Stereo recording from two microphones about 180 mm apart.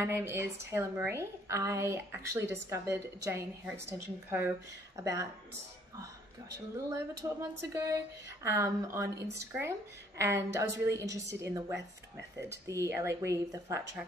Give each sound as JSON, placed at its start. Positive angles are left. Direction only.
{"t": 0.0, "sound": "a woman's voice", "side_deg": -15}
{"t": 6.9, "sound": "a woman's voice", "side_deg": -20}